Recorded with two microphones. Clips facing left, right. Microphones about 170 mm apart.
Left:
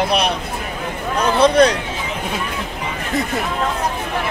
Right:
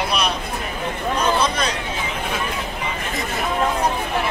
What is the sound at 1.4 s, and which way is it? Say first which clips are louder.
Speech: left 9 dB; 65° left (ahead or behind).